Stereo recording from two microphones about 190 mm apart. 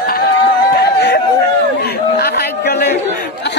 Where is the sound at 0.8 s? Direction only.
60° left (ahead or behind).